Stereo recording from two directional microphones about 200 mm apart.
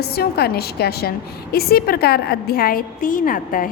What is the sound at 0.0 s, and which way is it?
A woman's voice, 50° left (ahead or behind).